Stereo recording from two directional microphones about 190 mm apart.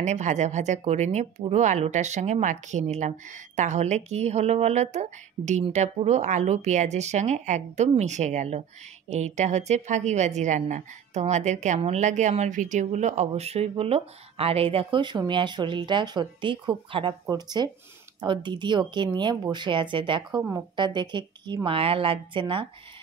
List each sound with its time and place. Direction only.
0.0 s speech: 40° right (ahead or behind)